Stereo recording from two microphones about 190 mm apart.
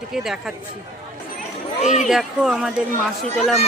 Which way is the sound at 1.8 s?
35° left (ahead or behind).